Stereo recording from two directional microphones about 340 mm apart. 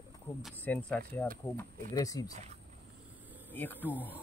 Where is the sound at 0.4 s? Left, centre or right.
Centre.